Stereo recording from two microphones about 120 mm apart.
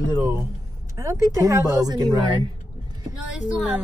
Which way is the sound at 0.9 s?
25° right (ahead or behind).